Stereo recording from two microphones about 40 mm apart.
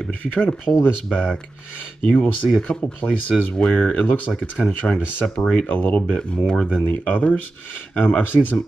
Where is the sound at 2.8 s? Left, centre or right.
Left.